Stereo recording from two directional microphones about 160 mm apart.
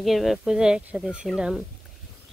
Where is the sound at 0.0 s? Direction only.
Centre (ahead or behind).